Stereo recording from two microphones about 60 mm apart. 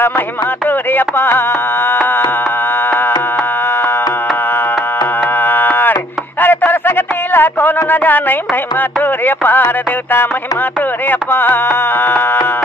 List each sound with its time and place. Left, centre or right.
0.9 s music: left
5.4 s a sound: left
9.2 s music: left
11.1 s music: left